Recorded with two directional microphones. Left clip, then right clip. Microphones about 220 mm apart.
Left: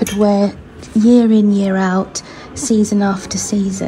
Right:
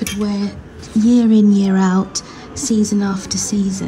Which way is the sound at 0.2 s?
Centre (ahead or behind).